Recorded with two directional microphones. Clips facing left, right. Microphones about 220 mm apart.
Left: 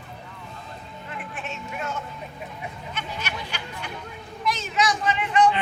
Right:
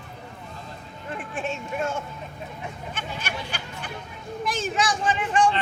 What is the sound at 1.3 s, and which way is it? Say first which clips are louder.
Speech: right 7 dB; 30° right (ahead or behind).